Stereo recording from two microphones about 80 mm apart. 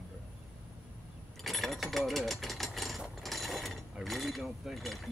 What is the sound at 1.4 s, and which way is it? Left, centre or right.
Speech, centre.